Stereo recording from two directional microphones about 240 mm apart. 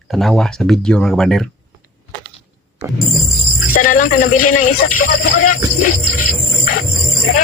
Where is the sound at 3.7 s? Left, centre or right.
Left.